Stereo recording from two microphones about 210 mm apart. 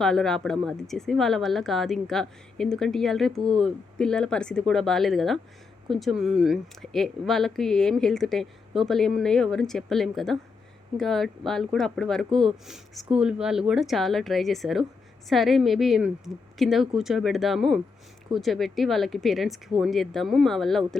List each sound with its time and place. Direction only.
0.0 s speech: centre (ahead or behind)